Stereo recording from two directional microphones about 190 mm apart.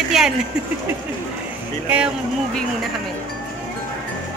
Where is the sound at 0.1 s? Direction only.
Centre (ahead or behind).